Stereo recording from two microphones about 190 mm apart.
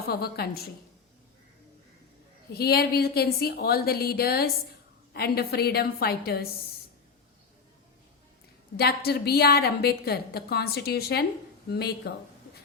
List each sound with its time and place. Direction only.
0.1 s a woman's voice: 55° left (ahead or behind)
2.5 s a woman's voice: 55° left (ahead or behind)
8.7 s a woman's voice: 55° left (ahead or behind)